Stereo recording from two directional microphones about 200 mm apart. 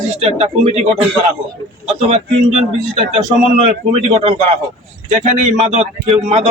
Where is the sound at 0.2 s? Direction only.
30° right (ahead or behind).